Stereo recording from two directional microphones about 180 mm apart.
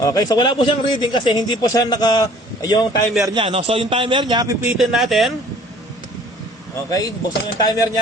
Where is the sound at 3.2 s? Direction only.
25° right (ahead or behind).